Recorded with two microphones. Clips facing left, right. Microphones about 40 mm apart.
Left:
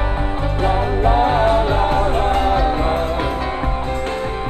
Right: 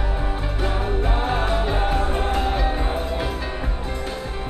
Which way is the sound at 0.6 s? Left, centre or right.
Left.